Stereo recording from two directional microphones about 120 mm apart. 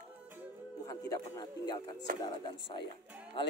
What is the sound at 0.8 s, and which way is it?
Speech, 30° left (ahead or behind).